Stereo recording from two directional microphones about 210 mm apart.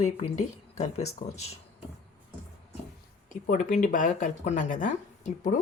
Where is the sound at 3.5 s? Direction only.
35° left (ahead or behind).